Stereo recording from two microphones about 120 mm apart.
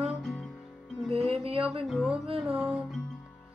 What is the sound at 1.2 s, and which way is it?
Music, 55° right (ahead or behind).